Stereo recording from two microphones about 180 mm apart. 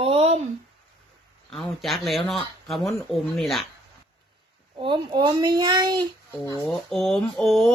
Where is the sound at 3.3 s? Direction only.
Centre (ahead or behind).